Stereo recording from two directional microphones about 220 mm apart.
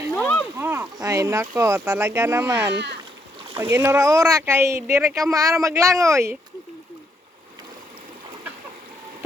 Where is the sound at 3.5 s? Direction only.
10° right (ahead or behind).